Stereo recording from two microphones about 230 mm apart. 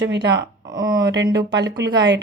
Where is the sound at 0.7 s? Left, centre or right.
Centre.